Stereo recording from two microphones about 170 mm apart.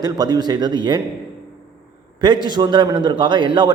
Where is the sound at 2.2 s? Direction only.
25° right (ahead or behind).